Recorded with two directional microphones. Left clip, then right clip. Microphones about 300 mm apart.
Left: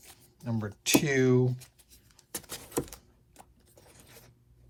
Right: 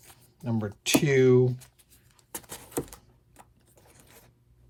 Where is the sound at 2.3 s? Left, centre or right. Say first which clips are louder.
Even; centre.